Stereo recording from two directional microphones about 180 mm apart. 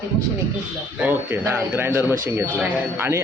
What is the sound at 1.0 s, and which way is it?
A man's voice, 10° right (ahead or behind).